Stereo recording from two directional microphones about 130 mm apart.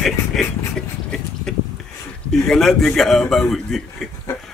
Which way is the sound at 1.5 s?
5° left (ahead or behind).